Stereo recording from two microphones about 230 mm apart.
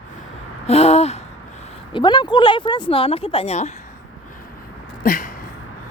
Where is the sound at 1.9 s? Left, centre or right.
Centre.